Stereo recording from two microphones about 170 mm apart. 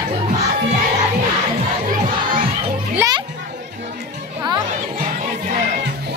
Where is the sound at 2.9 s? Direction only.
20° right (ahead or behind).